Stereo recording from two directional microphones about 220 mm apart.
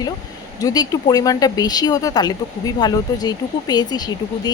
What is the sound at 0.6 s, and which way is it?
Speech, 20° left (ahead or behind).